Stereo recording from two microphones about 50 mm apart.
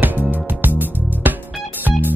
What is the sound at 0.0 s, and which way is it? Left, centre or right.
Music, right.